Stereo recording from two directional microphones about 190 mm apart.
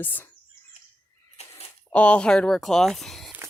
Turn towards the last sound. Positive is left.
turn(degrees=0)  # may be behind; listen again after turning